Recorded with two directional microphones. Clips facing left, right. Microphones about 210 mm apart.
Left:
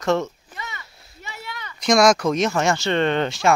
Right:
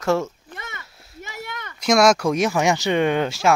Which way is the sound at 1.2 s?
50° right (ahead or behind).